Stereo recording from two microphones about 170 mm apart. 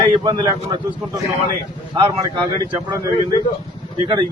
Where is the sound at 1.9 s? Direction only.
25° right (ahead or behind).